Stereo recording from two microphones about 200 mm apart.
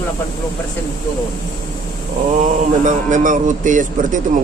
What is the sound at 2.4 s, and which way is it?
Speech, 40° right (ahead or behind).